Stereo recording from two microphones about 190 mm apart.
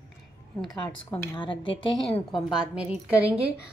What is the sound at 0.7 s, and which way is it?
Speech, 15° left (ahead or behind).